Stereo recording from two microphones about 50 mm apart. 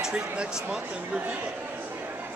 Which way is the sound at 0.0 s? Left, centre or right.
Centre.